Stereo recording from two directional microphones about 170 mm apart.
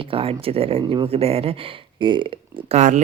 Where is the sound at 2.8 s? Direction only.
45° right (ahead or behind).